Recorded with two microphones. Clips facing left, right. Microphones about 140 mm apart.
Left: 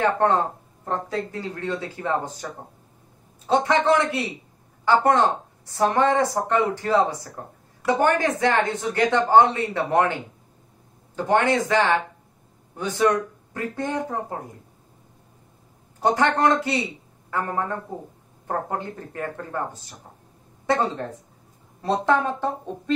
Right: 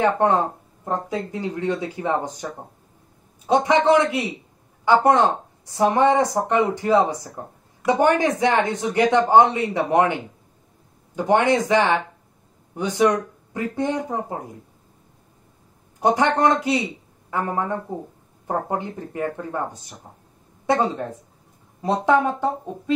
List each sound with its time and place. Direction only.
0.0 s a woman's voice: 15° right (ahead or behind)
3.4 s a woman's voice: 15° right (ahead or behind)
11.1 s a woman's voice: 15° right (ahead or behind)
16.0 s a woman's voice: 15° right (ahead or behind)